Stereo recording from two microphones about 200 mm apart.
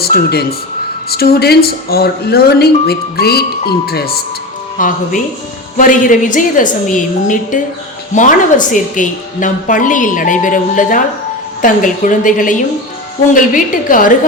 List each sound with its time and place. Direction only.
0.0 s a woman's voice: 50° left (ahead or behind)